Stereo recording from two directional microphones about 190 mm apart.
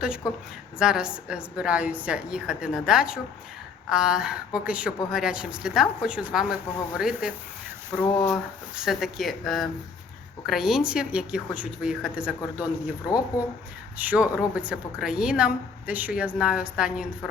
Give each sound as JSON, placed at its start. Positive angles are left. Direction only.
{"t": 0.8, "sound": "a woman's voice", "side_deg": -5}
{"t": 13.1, "sound": "speech", "side_deg": 20}
{"t": 14.0, "sound": "a woman's voice", "side_deg": -5}